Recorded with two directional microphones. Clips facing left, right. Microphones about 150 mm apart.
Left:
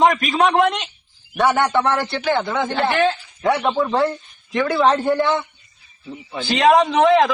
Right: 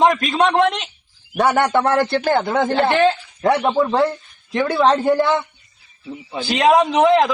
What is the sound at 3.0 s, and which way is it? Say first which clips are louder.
Speech: right 3 dB; centre (ahead or behind).